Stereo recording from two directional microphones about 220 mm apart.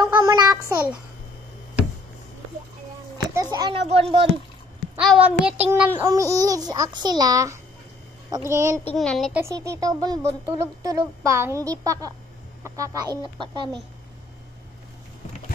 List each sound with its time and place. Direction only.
0.0 s a sound: 20° right (ahead or behind)
3.3 s a sound: 20° right (ahead or behind)
3.8 s speech: 25° right (ahead or behind)
4.9 s a child's voice: 5° right (ahead or behind)
8.8 s a child's voice: 5° left (ahead or behind)
9.4 s speech: 15° right (ahead or behind)